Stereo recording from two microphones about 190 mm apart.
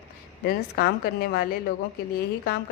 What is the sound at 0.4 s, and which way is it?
A woman's voice, 55° left (ahead or behind).